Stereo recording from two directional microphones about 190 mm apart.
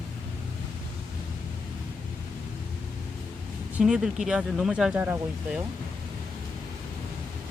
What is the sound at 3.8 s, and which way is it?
Speech, 5° right (ahead or behind).